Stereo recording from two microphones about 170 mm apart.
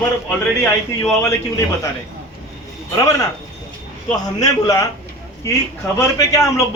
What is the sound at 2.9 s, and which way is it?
Speech, 20° left (ahead or behind).